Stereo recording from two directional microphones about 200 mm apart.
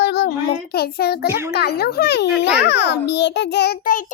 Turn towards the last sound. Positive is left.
turn(degrees=45)  # may be behind; listen again after turning